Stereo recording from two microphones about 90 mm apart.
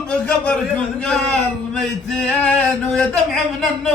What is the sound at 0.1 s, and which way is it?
A man's voice, 15° left (ahead or behind).